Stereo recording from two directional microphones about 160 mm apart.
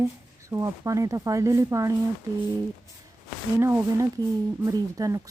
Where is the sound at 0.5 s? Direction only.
20° right (ahead or behind).